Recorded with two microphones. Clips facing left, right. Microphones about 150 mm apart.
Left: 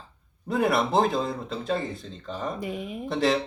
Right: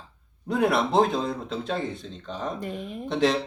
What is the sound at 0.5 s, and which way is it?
Speech, centre (ahead or behind).